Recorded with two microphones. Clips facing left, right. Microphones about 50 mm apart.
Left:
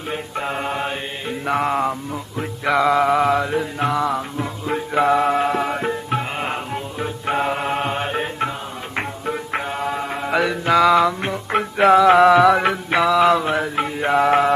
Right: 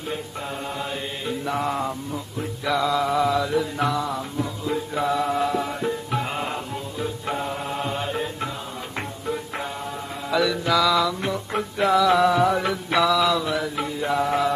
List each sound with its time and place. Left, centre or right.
0.1 s mantra: left
4.0 s music: left
7.3 s music: left
9.8 s mantra: left
10.2 s music: left
12.0 s mantra: left
12.9 s mantra: left